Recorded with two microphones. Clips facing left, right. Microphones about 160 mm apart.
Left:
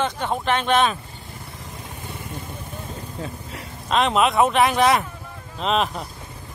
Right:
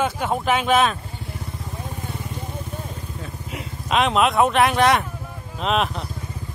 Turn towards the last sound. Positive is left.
turn(degrees=0)  # may be behind; listen again after turning